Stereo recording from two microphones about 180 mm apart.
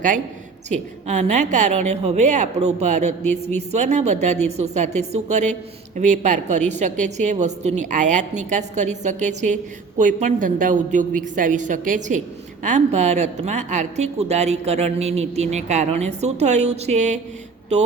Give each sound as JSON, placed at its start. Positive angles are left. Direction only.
{"t": 0.7, "sound": "a woman's voice", "side_deg": -40}